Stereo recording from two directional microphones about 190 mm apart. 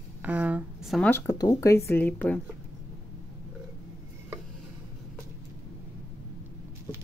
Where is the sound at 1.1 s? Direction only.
15° left (ahead or behind).